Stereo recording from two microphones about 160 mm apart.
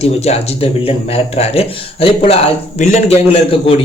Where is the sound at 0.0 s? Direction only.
40° left (ahead or behind).